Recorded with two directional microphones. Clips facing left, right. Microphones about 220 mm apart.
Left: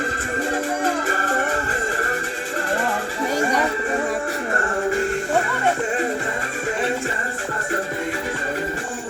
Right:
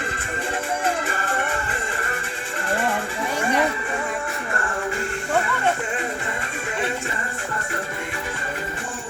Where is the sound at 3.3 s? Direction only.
40° left (ahead or behind).